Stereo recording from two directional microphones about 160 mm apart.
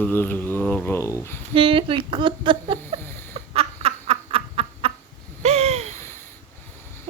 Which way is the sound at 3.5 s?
40° right (ahead or behind).